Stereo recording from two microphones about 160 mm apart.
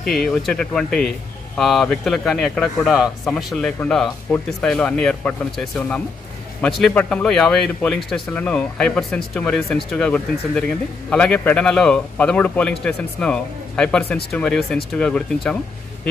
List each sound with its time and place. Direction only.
0.0 s a man's voice: centre (ahead or behind)